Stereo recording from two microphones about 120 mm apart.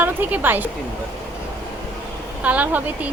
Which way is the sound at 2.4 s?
15° right (ahead or behind).